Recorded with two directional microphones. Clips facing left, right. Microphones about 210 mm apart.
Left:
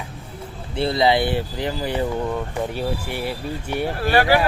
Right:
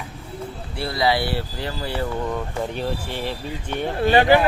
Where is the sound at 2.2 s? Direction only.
5° left (ahead or behind).